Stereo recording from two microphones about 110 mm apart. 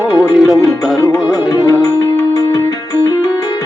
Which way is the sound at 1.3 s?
30° left (ahead or behind).